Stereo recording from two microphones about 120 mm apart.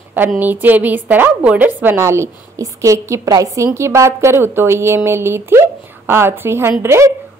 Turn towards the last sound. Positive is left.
turn(degrees=-20)  # may be behind; listen again after turning